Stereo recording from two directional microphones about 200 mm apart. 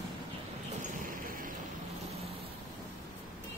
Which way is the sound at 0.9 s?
45° right (ahead or behind).